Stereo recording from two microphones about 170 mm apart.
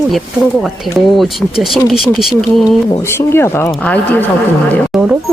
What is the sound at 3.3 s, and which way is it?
Speech, 15° left (ahead or behind).